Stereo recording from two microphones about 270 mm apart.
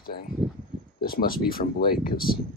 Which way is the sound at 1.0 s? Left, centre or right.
Left.